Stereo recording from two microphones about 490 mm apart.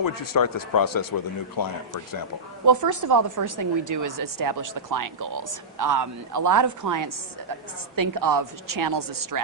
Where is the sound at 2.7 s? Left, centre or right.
Right.